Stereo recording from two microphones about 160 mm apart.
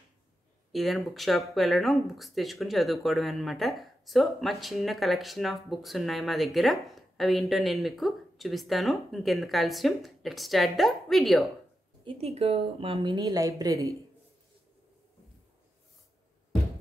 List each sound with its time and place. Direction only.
0.7 s speech: centre (ahead or behind)
12.0 s a woman's voice: 35° right (ahead or behind); by 13.9 s 20° right (ahead or behind)